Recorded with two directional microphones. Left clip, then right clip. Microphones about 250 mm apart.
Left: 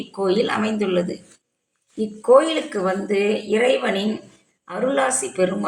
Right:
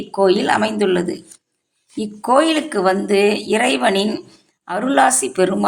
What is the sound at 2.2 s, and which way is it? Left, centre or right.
Speech, right.